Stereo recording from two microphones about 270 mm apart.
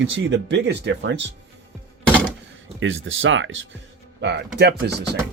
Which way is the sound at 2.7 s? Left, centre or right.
Right.